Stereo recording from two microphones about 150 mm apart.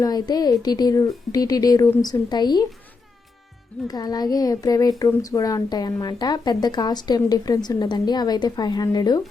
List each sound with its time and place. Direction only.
0.0 s speech: 25° left (ahead or behind)
3.8 s speech: 25° left (ahead or behind)